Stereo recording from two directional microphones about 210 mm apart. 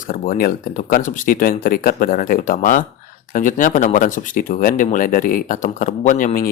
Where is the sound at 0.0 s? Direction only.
40° left (ahead or behind).